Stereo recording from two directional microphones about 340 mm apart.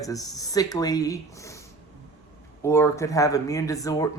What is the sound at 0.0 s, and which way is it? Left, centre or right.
Speech, centre.